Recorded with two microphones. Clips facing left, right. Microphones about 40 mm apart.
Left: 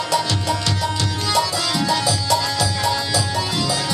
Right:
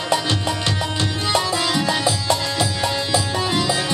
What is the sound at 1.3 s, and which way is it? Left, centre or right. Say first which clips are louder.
Music: even; right.